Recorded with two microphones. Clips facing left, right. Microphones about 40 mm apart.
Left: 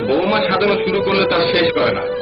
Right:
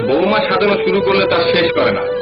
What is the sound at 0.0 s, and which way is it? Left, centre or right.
A man's voice, centre.